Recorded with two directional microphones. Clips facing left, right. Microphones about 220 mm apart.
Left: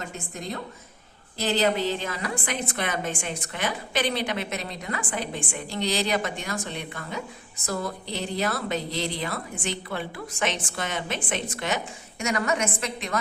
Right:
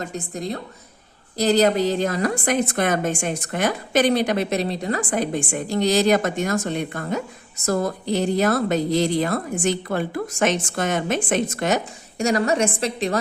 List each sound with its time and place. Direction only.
0.0 s a woman's voice: 35° right (ahead or behind)